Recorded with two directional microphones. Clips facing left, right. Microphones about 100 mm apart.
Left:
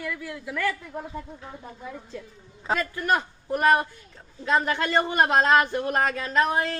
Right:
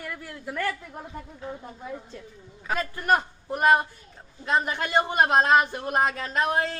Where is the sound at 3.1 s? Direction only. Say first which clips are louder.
Right 1 dB; 20° right (ahead or behind).